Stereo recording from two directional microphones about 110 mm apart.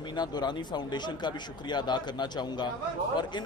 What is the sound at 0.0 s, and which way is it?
A man's voice, 40° left (ahead or behind).